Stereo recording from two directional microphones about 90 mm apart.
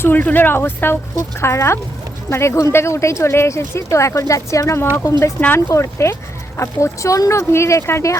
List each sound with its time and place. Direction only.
0.0 s speech: 20° left (ahead or behind)
1.1 s speech: 35° left (ahead or behind)